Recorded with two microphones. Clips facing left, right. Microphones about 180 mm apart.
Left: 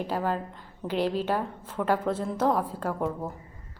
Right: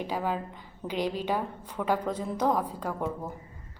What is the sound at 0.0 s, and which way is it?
A woman's voice, 5° right (ahead or behind).